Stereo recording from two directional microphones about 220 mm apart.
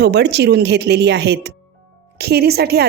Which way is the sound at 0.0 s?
50° right (ahead or behind).